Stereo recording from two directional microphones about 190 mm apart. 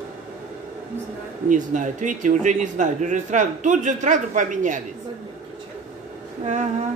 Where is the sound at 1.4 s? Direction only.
40° right (ahead or behind).